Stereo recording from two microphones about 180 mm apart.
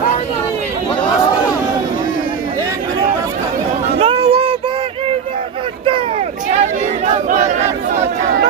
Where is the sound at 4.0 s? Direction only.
35° right (ahead or behind).